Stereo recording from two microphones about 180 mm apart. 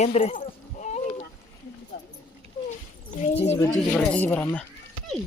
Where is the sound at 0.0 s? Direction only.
35° left (ahead or behind).